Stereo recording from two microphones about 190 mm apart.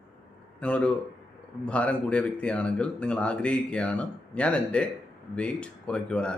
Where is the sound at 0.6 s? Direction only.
5° left (ahead or behind).